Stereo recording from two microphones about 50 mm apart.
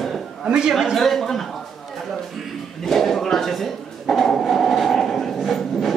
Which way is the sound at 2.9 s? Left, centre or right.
Centre.